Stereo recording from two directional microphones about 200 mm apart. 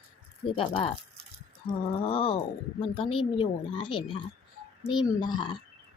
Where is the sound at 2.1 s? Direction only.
30° left (ahead or behind).